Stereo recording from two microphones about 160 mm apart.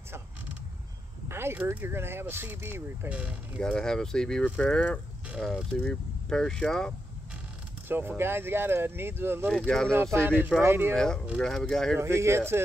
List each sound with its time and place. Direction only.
1.3 s speech: 15° right (ahead or behind)
3.6 s speech: 5° left (ahead or behind)
8.2 s speech: 15° right (ahead or behind)
9.5 s speech: 5° left (ahead or behind)
10.1 s speech: 15° right (ahead or behind)
11.3 s speech: 5° left (ahead or behind)
12.0 s speech: 15° right (ahead or behind)